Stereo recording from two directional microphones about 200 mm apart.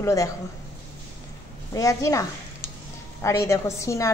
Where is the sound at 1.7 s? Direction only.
15° left (ahead or behind).